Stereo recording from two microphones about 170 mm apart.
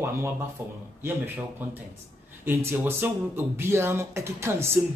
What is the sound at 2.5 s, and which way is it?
Speech, 15° right (ahead or behind).